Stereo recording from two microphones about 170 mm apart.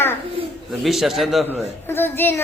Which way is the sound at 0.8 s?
Centre (ahead or behind).